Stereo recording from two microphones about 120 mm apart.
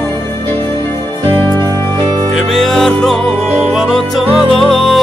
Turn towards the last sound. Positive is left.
turn(degrees=0)  # may be behind; listen again after turning